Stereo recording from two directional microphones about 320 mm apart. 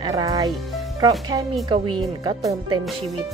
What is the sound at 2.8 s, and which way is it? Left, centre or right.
Speech, centre.